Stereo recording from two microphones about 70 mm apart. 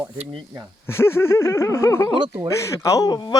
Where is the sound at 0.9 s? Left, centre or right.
Left.